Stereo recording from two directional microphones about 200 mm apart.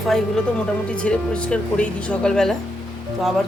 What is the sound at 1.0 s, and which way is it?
Speech, 5° left (ahead or behind).